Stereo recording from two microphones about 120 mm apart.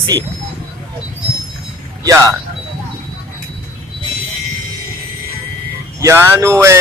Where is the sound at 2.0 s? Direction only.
25° right (ahead or behind).